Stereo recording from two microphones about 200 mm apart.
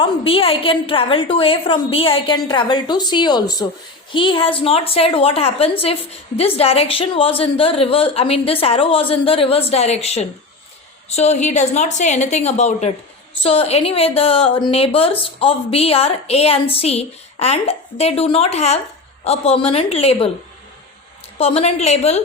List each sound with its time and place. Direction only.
0.0 s a woman's voice: 30° left (ahead or behind)
21.3 s a woman's voice: 30° left (ahead or behind)